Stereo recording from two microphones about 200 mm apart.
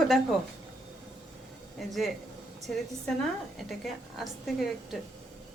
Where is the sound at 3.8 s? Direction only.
Centre (ahead or behind).